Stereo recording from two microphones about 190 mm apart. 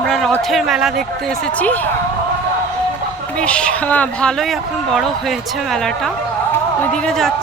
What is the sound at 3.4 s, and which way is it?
Speech, 5° left (ahead or behind).